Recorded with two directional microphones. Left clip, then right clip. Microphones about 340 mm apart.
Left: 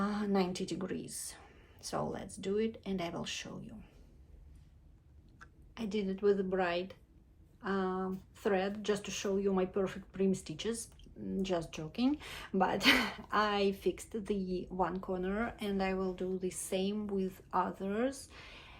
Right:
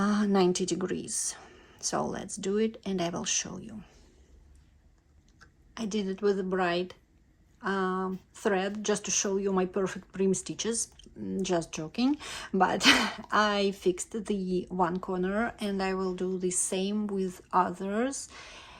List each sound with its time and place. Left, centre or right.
0.0 s speech: right
5.7 s speech: right